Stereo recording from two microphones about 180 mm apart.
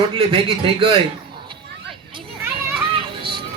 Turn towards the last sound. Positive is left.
turn(degrees=-30)  # may be behind; listen again after turning